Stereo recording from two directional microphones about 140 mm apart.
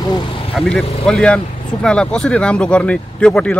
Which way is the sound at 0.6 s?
Centre (ahead or behind).